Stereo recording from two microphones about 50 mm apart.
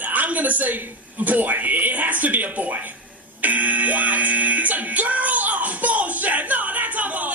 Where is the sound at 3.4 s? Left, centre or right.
Right.